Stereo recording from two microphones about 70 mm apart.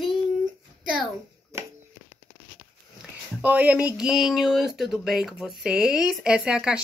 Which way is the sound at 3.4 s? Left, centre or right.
Right.